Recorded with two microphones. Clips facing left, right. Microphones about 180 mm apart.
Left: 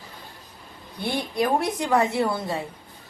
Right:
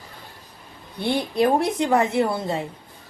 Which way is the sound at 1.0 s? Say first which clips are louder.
Right 4 dB; 30° right (ahead or behind).